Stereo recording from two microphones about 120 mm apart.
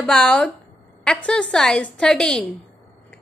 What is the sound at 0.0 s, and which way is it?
A woman's voice, 5° left (ahead or behind).